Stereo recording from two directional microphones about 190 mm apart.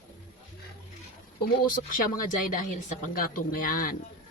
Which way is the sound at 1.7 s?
45° left (ahead or behind).